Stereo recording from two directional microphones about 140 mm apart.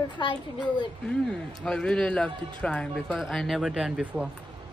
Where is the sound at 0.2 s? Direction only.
35° left (ahead or behind).